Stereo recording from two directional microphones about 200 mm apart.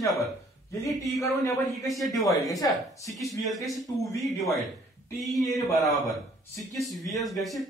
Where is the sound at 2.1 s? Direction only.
Centre (ahead or behind).